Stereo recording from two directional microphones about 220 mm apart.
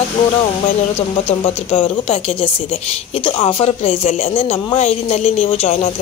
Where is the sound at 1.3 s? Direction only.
25° left (ahead or behind).